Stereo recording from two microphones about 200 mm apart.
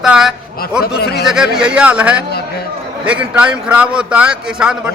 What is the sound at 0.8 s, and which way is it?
Speech, 50° left (ahead or behind).